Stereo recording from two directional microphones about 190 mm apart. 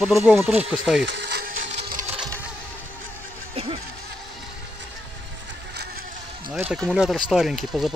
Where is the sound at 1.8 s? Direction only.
50° right (ahead or behind).